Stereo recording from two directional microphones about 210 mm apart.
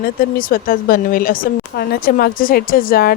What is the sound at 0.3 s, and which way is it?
Speech, 40° left (ahead or behind).